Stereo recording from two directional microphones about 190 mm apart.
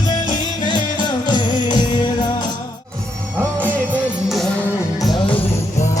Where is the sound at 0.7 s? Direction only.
25° left (ahead or behind).